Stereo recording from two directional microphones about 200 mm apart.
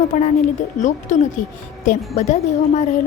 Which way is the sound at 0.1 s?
40° left (ahead or behind).